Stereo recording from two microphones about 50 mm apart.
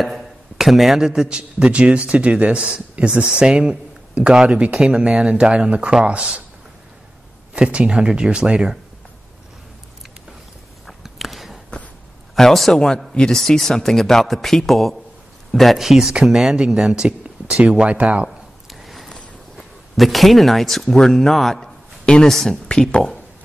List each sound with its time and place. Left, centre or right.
0.0 s a man's voice: centre; by 4.7 s right
4.7 s speech: centre
7.5 s speech: centre
10.9 s a sound: centre
12.4 s a man's voice: centre; by 18.3 s right
18.7 s a sound: centre
19.5 s speech: centre
22.0 s speech: centre
22.3 s a man's voice: centre
22.7 s speech: centre